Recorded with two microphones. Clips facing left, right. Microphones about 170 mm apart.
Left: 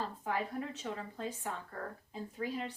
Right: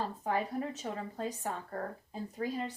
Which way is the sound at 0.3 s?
40° right (ahead or behind).